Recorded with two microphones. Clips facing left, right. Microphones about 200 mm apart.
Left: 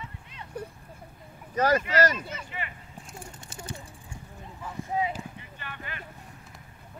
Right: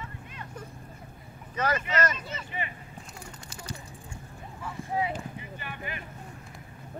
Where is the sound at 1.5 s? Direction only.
40° left (ahead or behind).